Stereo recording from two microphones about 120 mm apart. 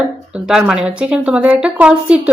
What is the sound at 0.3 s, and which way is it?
A woman's voice, 5° right (ahead or behind).